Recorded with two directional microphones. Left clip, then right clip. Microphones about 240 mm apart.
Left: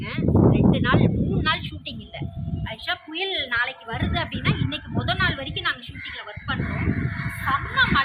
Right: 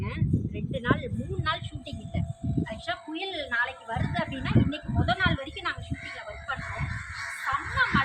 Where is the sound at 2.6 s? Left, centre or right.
Centre.